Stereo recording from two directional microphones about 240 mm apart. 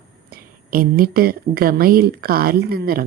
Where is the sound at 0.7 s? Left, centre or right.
Right.